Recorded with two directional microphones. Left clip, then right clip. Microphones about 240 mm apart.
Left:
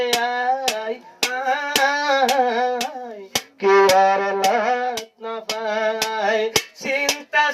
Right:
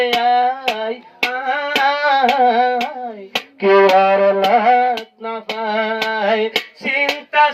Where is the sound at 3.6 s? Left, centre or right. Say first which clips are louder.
Right 3 dB; right.